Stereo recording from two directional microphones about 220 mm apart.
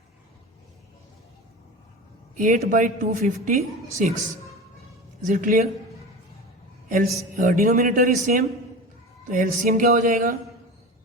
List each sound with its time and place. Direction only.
2.3 s a woman's voice: 35° right (ahead or behind)
6.8 s a woman's voice: 35° right (ahead or behind)